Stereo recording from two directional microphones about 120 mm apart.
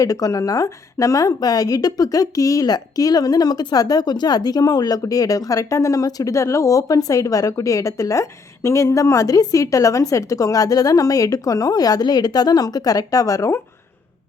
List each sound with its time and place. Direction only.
0.0 s a woman's voice: 30° left (ahead or behind)